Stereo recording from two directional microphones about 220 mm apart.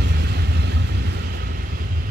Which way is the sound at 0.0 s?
50° right (ahead or behind).